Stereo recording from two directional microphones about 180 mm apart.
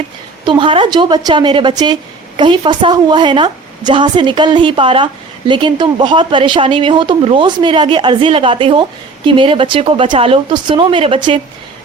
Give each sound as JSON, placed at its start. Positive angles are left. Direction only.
{"t": 0.4, "sound": "speech", "side_deg": -30}